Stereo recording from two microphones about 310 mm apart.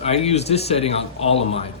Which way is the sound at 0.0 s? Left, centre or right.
Centre.